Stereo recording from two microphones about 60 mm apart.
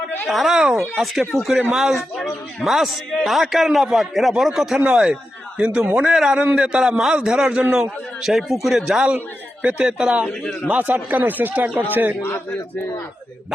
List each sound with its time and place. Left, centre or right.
0.3 s a man's voice: centre
9.0 s a man's voice: right
10.8 s a man's voice: right